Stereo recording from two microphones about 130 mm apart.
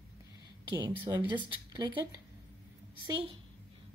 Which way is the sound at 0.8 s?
35° right (ahead or behind).